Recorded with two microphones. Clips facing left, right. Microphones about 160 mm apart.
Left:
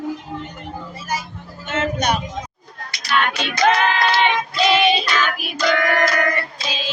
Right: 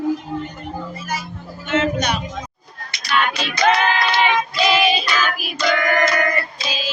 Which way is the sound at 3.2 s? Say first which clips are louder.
Even; centre (ahead or behind).